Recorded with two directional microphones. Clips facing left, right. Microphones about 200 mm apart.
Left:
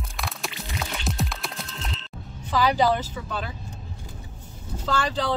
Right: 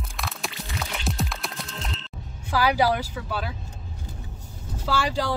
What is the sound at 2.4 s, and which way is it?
Speech, 10° right (ahead or behind).